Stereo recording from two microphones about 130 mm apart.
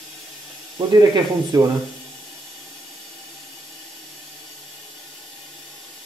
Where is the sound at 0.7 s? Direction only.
25° right (ahead or behind).